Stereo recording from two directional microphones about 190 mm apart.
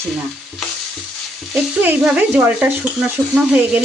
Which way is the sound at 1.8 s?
5° right (ahead or behind).